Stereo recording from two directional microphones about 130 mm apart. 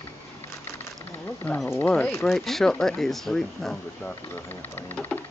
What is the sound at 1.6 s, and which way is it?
Speech, 15° left (ahead or behind).